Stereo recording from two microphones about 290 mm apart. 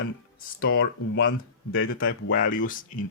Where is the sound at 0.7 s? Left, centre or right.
Left.